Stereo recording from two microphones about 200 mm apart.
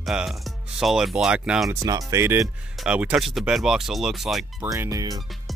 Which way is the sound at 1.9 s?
15° right (ahead or behind).